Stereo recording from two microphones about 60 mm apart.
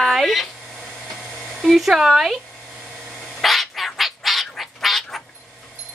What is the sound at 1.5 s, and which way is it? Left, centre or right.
Speech, centre.